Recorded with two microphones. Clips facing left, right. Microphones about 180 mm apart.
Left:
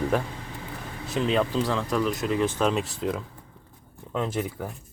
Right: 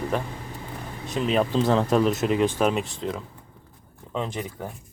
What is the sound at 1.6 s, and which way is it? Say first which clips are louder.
Speech: right 6 dB; 45° right (ahead or behind).